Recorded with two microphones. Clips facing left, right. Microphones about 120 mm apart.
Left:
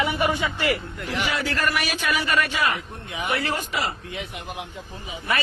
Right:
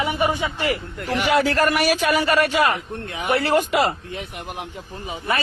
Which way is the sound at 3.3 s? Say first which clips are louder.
Right 8 dB; 35° right (ahead or behind).